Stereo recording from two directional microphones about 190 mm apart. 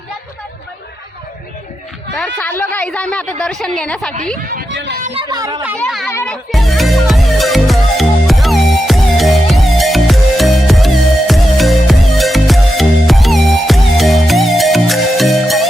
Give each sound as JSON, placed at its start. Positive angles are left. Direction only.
{"t": 2.1, "sound": "speech", "side_deg": 10}
{"t": 4.7, "sound": "speech", "side_deg": -75}
{"t": 5.3, "sound": "speech", "side_deg": -20}
{"t": 5.8, "sound": "speech", "side_deg": 0}
{"t": 6.1, "sound": "music", "side_deg": 10}